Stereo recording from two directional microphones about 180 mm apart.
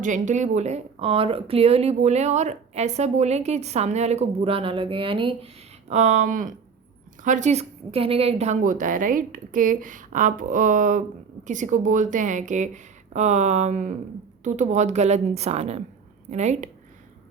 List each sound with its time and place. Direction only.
0.0 s a woman's voice: 45° right (ahead or behind)
5.9 s a woman's voice: 40° right (ahead or behind)